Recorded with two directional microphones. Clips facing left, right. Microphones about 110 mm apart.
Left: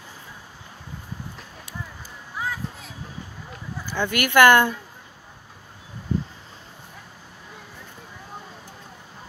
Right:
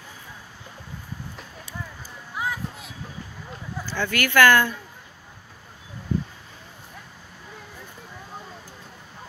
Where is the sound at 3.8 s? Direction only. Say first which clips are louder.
Left 1 dB; 15° left (ahead or behind).